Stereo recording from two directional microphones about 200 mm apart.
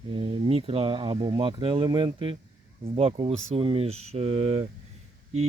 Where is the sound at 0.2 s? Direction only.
30° right (ahead or behind).